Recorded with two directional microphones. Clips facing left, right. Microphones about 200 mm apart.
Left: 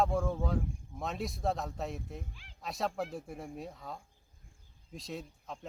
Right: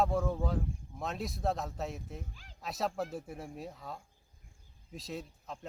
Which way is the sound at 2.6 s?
Centre (ahead or behind).